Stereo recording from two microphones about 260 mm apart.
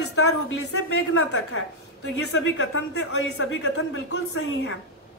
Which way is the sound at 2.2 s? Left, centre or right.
Left.